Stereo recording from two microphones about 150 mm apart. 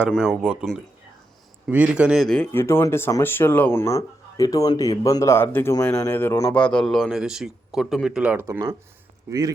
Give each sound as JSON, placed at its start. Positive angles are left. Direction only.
{"t": 0.1, "sound": "speech", "side_deg": -5}
{"t": 2.5, "sound": "speech", "side_deg": 15}